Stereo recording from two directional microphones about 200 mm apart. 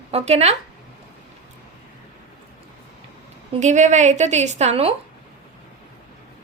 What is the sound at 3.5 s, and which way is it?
A woman's voice, 35° right (ahead or behind).